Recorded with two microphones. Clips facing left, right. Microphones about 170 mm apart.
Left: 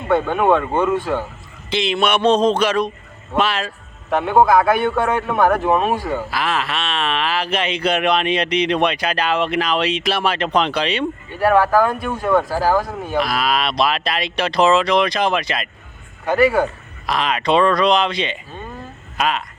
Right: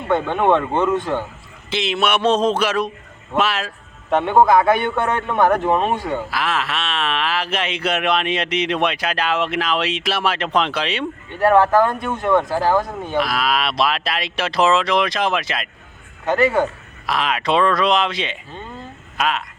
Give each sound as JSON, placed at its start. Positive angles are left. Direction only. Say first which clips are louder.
{"t": 0.1, "sound": "speech", "louder": "left 1 dB", "side_deg": 5}
{"t": 11.3, "sound": "speech", "louder": "right 1 dB", "side_deg": -20}
{"t": 13.0, "sound": "speech", "louder": "left 1 dB", "side_deg": 5}